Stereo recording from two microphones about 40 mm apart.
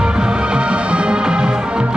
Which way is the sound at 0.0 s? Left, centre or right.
Right.